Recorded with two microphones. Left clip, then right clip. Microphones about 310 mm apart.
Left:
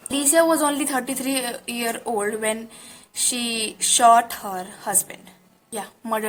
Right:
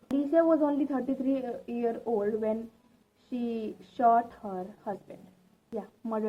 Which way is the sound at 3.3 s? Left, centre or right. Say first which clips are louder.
Left 7 dB; left.